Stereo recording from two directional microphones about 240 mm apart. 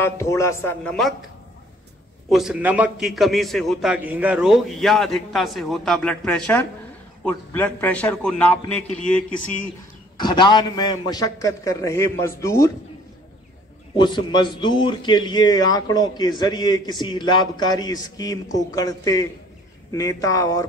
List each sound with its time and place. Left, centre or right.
0.0 s a man's voice: centre
2.2 s a man's voice: centre
10.1 s a man's voice: centre
13.9 s a man's voice: centre